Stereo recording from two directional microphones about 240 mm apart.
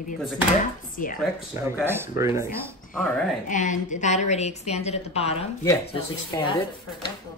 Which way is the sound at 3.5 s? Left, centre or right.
Left.